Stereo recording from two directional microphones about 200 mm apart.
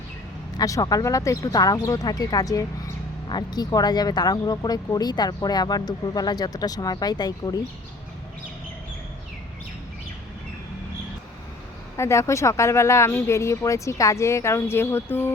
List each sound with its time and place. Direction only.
0.5 s speech: 20° left (ahead or behind)
11.9 s speech: 15° left (ahead or behind)